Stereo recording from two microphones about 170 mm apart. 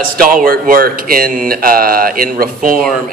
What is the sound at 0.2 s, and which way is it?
A man's voice, 55° right (ahead or behind).